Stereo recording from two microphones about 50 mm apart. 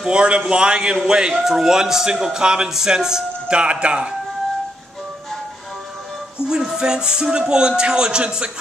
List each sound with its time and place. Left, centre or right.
0.0 s a man's voice: centre
6.4 s a man's voice: centre